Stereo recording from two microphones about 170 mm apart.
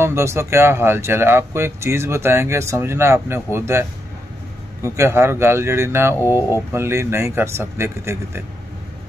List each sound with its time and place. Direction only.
0.0 s speech: 15° right (ahead or behind)
4.8 s speech: 15° right (ahead or behind)